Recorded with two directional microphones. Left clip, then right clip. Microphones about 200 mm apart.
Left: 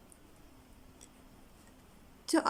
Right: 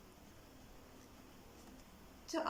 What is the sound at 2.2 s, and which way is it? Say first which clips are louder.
Speech: left 10 dB; 55° left (ahead or behind).